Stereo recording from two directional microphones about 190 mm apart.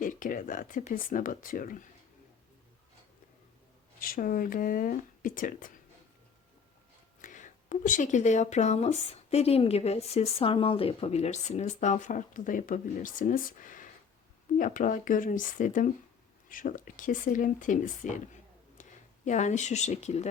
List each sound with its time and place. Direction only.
0.0 s speech: 45° left (ahead or behind)
4.0 s speech: 45° left (ahead or behind)
7.2 s speech: 45° left (ahead or behind)